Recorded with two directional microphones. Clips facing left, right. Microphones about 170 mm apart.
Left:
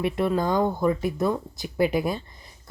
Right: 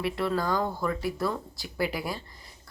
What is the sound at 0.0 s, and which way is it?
Speech, 20° left (ahead or behind).